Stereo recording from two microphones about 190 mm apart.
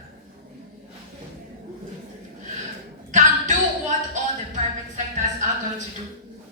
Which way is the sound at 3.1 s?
40° right (ahead or behind).